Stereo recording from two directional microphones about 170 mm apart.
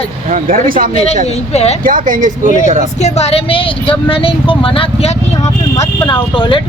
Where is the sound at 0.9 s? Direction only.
40° left (ahead or behind).